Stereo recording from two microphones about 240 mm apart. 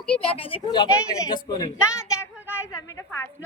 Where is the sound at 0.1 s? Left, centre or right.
Left.